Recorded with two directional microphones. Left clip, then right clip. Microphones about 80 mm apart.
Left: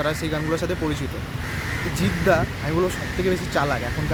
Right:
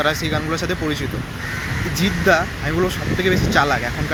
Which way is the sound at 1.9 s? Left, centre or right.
Left.